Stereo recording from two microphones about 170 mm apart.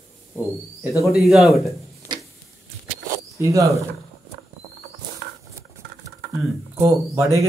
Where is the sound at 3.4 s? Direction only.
20° right (ahead or behind).